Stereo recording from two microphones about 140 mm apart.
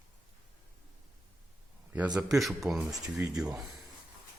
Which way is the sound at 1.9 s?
10° right (ahead or behind).